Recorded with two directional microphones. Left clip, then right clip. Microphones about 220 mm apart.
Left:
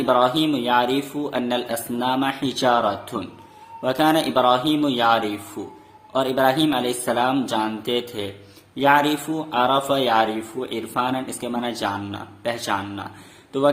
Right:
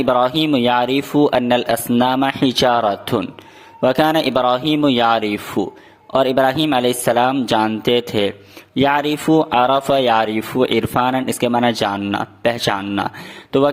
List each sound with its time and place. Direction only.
0.0 s speech: 35° right (ahead or behind)